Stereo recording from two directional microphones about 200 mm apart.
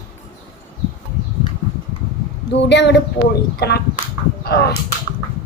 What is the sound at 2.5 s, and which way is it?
A woman's voice, 60° left (ahead or behind).